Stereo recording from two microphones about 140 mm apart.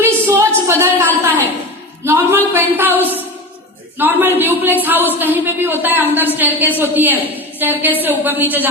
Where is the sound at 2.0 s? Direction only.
15° right (ahead or behind).